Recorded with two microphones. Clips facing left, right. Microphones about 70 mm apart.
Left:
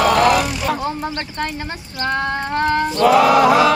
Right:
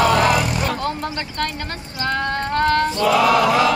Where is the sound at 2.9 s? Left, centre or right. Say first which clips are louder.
Left 4 dB; left.